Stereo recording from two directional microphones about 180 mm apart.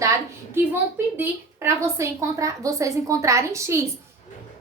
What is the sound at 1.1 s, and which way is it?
A woman's voice, 15° right (ahead or behind).